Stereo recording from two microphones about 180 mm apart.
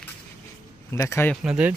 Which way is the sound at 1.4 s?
5° right (ahead or behind).